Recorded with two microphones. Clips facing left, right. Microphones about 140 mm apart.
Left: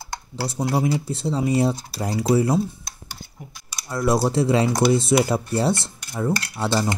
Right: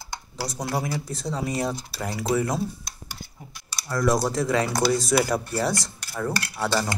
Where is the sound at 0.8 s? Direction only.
25° left (ahead or behind).